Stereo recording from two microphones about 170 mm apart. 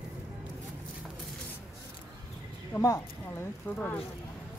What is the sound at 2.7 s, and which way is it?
Speech, 15° left (ahead or behind).